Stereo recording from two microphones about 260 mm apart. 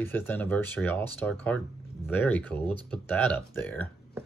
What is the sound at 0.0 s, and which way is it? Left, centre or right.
Speech, centre.